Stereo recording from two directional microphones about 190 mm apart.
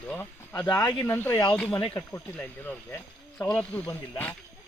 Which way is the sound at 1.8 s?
25° left (ahead or behind).